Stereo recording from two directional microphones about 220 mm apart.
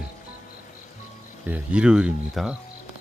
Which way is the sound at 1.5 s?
5° right (ahead or behind).